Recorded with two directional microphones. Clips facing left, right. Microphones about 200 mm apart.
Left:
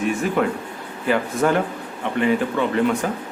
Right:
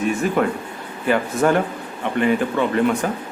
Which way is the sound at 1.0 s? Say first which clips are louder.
Right 2 dB; 50° right (ahead or behind).